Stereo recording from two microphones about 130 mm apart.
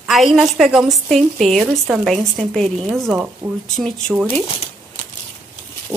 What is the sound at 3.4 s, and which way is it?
Speech, 20° right (ahead or behind).